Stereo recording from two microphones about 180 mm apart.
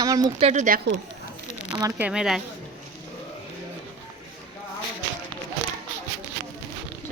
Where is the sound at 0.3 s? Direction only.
40° right (ahead or behind).